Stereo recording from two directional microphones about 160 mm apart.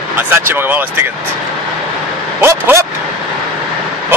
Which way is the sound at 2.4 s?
15° right (ahead or behind).